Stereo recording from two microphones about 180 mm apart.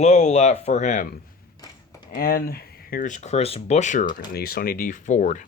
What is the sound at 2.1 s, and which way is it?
Speech, 55° left (ahead or behind).